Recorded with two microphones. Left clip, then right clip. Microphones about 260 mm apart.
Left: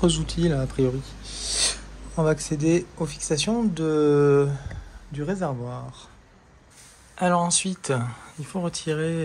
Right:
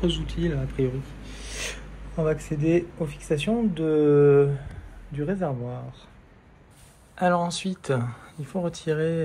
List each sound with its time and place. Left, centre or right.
0.0 s speech: centre
7.2 s speech: centre